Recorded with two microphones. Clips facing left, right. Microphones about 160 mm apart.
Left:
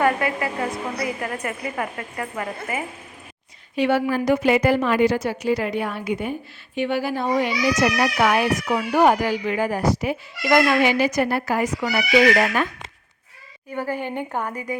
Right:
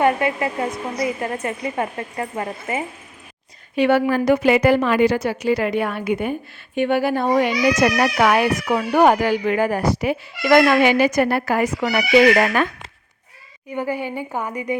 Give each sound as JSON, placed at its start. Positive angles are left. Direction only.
{"t": 0.0, "sound": "a woman's voice", "side_deg": -25}
{"t": 3.8, "sound": "a woman's voice", "side_deg": -60}
{"t": 13.7, "sound": "a woman's voice", "side_deg": -15}